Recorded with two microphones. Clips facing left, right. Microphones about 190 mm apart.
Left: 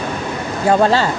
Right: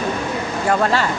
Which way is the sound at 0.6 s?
30° left (ahead or behind).